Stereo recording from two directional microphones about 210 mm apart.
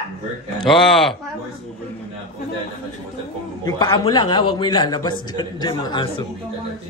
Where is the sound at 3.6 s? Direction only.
20° left (ahead or behind).